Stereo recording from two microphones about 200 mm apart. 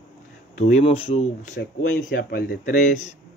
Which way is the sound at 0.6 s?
35° left (ahead or behind).